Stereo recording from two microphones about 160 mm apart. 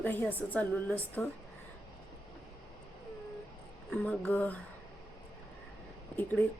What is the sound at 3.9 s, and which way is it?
Speech, 5° left (ahead or behind).